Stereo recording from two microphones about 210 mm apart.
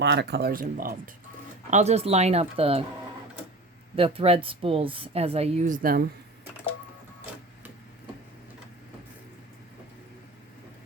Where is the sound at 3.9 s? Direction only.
25° right (ahead or behind); by 6.0 s 45° right (ahead or behind).